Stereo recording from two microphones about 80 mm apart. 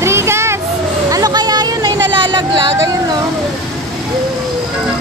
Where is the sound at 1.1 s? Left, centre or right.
Right.